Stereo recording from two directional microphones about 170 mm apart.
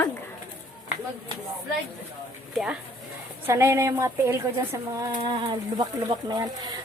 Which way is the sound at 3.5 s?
15° right (ahead or behind).